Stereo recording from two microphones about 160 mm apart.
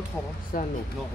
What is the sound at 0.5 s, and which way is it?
Speech, 65° left (ahead or behind).